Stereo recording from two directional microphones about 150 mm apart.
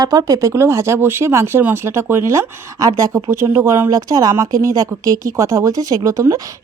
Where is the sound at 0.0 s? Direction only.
25° right (ahead or behind).